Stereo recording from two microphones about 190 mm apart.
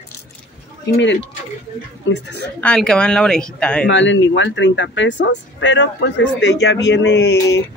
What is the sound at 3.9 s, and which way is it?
Speech, 75° left (ahead or behind).